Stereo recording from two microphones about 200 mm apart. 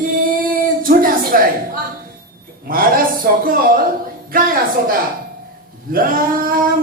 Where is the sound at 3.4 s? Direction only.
45° right (ahead or behind).